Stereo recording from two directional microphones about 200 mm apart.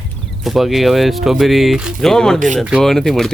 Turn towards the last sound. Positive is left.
turn(degrees=0)  # may be behind; listen again after turning